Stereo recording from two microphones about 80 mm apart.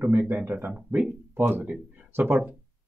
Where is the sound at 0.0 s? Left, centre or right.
Right.